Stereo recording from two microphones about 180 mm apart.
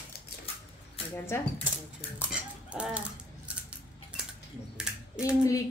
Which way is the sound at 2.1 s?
5° right (ahead or behind).